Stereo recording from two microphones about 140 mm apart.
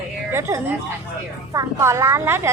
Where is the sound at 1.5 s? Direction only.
20° right (ahead or behind).